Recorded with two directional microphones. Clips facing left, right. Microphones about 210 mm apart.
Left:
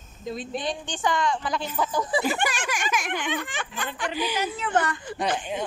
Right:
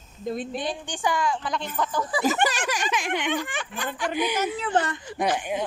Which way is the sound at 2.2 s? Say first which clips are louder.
Right 3 dB; 40° right (ahead or behind).